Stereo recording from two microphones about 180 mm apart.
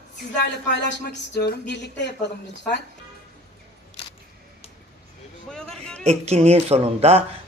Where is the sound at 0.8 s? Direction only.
70° left (ahead or behind).